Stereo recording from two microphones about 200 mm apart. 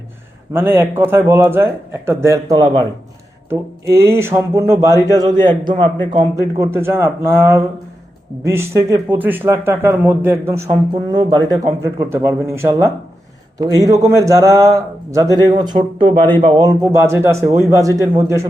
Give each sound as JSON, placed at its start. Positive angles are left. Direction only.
{"t": 0.5, "sound": "a man's voice", "side_deg": -10}